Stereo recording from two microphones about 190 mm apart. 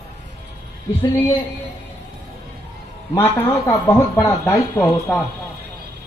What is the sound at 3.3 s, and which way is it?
Speech, 10° left (ahead or behind).